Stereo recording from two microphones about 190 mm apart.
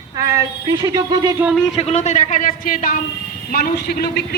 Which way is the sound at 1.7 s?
35° left (ahead or behind).